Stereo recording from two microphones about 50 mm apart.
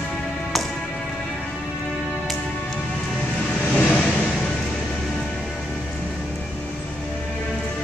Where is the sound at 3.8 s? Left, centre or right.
Left.